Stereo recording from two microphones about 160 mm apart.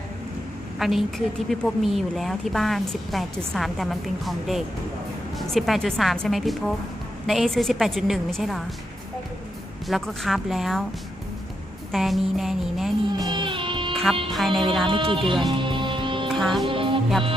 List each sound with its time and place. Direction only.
0.7 s a woman's voice: centre (ahead or behind)
9.8 s a woman's voice: centre (ahead or behind)
11.9 s a woman's voice: centre (ahead or behind)
13.3 s music: 30° right (ahead or behind)
14.3 s a woman's voice: centre (ahead or behind)
14.9 s speech: 35° right (ahead or behind)
15.6 s music: 30° right (ahead or behind)
16.3 s music: centre (ahead or behind)
16.6 s music: 30° right (ahead or behind)